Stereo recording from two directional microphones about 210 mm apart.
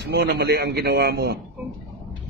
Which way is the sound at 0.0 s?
50° right (ahead or behind).